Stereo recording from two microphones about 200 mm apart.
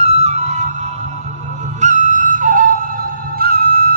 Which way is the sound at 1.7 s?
35° right (ahead or behind).